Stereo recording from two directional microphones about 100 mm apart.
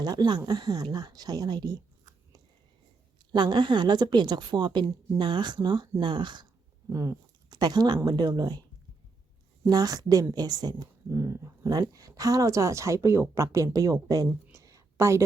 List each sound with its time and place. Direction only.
0.0 s a woman's voice: 45° right (ahead or behind)
3.3 s a woman's voice: 50° right (ahead or behind)
6.9 s a woman's voice: 35° right (ahead or behind)
9.6 s speech: 40° right (ahead or behind)
11.1 s speech: 30° right (ahead or behind)
14.5 s a sound: 35° right (ahead or behind)